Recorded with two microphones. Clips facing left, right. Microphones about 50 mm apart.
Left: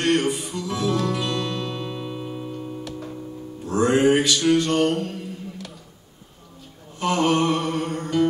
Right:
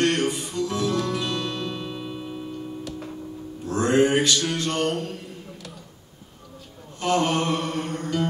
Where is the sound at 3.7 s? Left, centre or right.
Centre.